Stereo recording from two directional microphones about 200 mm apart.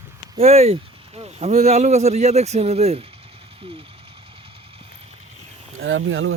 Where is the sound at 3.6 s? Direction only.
25° right (ahead or behind).